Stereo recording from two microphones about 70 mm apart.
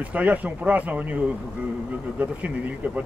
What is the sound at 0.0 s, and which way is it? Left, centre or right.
Speech, right.